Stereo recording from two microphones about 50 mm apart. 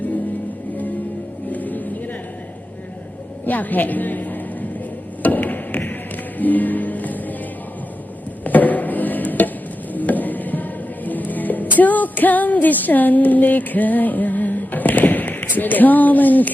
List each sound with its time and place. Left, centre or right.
1.5 s music: left
3.4 s a woman's voice: left
5.2 s a sound: left
6.4 s music: left
8.4 s a sound: left
9.9 s music: left